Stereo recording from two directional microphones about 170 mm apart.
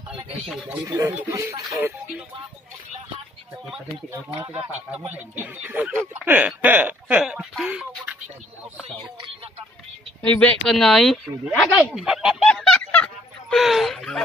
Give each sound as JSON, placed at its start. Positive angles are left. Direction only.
{"t": 0.5, "sound": "speech", "side_deg": 0}
{"t": 0.8, "sound": "speech", "side_deg": -15}
{"t": 4.6, "sound": "speech", "side_deg": -10}
{"t": 10.2, "sound": "speech", "side_deg": 10}